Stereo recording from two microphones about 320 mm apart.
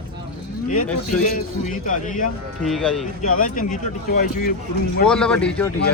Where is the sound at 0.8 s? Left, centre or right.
Centre.